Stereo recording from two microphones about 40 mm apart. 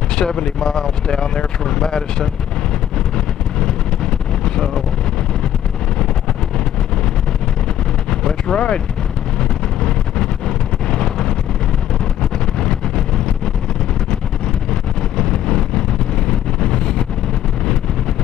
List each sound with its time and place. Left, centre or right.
0.1 s speech: centre
3.5 s vehicle: centre
8.1 s vehicle: centre
10.9 s wind noise: centre
12.5 s vehicle: centre
14.7 s vehicle: centre